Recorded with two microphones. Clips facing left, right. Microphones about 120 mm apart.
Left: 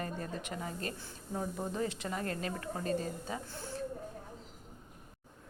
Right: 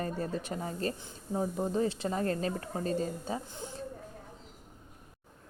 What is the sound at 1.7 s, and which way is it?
A woman's voice, 30° right (ahead or behind).